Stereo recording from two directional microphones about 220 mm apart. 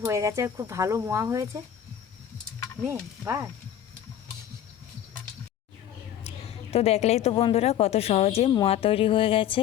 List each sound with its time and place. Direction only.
0.0 s speech: 15° right (ahead or behind)
2.8 s speech: 10° right (ahead or behind)
6.2 s a woman's voice: 30° left (ahead or behind)